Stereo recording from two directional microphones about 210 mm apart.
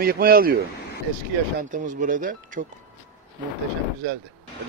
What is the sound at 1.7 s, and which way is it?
Speech, 40° right (ahead or behind).